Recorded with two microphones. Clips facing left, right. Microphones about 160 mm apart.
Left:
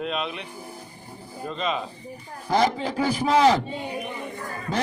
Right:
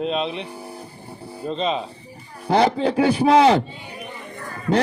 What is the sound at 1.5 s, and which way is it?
Speech, 30° right (ahead or behind).